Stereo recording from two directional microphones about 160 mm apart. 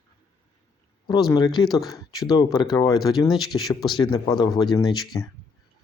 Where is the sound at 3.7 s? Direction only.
Centre (ahead or behind).